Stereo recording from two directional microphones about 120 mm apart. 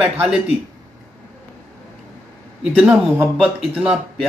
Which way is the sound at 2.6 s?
5° right (ahead or behind).